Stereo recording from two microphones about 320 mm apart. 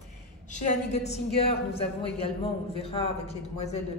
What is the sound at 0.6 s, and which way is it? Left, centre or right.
A woman's voice, left.